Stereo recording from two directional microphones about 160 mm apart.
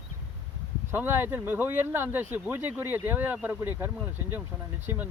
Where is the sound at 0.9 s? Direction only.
15° right (ahead or behind).